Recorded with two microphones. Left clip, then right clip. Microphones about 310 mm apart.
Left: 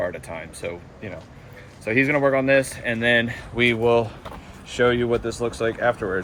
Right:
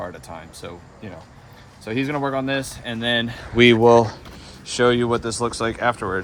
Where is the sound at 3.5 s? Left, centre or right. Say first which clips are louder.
Right 6 dB; right.